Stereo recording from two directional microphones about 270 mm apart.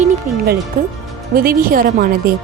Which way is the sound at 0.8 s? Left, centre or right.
Right.